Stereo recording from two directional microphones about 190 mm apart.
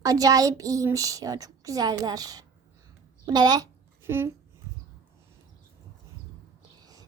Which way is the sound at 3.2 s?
20° right (ahead or behind).